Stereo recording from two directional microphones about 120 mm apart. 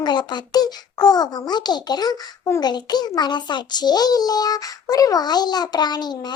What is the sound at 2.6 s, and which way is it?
A child's voice, 35° left (ahead or behind).